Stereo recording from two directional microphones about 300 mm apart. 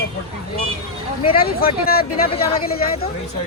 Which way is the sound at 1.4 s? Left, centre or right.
Left.